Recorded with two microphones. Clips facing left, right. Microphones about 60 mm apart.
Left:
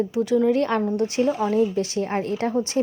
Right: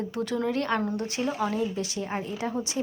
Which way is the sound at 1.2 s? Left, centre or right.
Centre.